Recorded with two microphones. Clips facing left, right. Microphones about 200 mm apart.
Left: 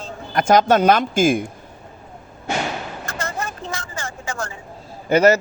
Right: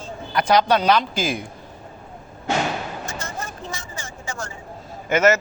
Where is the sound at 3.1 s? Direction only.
60° left (ahead or behind).